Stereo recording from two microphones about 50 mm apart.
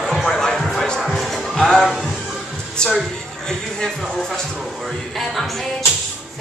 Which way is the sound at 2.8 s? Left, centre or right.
Centre.